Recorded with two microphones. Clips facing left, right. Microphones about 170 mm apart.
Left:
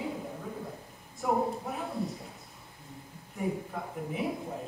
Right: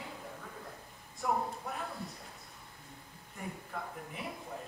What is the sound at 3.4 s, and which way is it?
Speech, centre (ahead or behind).